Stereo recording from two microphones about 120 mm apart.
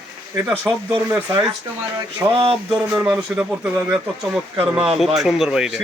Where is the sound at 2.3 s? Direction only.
50° right (ahead or behind).